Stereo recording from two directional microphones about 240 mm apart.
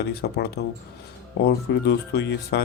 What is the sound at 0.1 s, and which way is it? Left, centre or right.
Speech, left.